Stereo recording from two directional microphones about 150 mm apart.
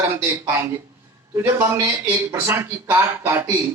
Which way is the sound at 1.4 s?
15° right (ahead or behind).